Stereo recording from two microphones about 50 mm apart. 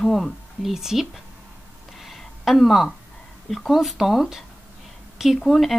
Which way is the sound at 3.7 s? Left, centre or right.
Centre.